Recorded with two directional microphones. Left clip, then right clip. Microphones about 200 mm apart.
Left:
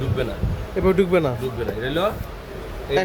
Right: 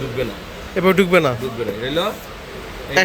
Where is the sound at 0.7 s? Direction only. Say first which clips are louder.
Right 4 dB; centre (ahead or behind).